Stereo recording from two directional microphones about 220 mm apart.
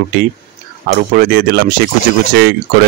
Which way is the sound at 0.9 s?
40° right (ahead or behind).